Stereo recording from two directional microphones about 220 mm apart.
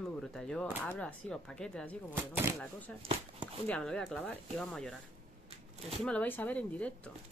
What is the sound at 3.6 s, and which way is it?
Speech, 5° left (ahead or behind).